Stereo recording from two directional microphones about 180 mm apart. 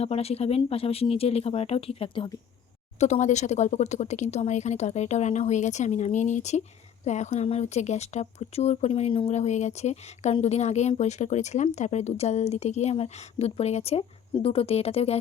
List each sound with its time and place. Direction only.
0.0 s speech: 35° left (ahead or behind)
3.0 s speech: 40° left (ahead or behind)